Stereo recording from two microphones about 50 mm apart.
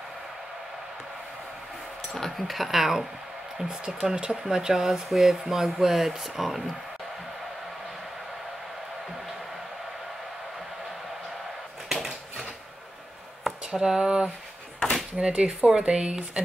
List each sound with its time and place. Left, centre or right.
2.1 s speech: centre
11.9 s a sound: centre
15.1 s speech: right